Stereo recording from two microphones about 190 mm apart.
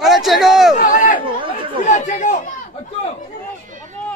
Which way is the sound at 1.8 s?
40° left (ahead or behind).